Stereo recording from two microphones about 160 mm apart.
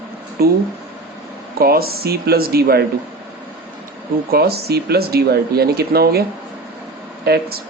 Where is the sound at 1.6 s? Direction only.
70° right (ahead or behind).